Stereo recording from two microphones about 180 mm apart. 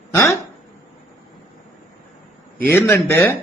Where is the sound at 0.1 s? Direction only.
15° left (ahead or behind).